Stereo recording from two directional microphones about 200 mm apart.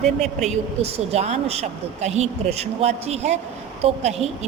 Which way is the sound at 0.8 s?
30° right (ahead or behind).